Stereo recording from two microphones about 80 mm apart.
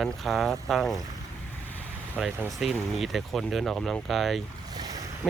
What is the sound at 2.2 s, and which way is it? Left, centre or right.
Speech, centre.